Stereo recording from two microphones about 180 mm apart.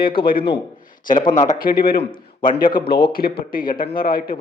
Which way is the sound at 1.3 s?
50° left (ahead or behind).